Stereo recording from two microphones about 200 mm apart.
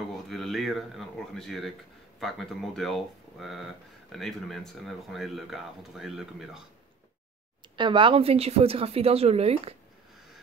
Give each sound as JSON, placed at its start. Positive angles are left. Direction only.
{"t": 0.3, "sound": "speech", "side_deg": 0}
{"t": 7.7, "sound": "speech", "side_deg": -25}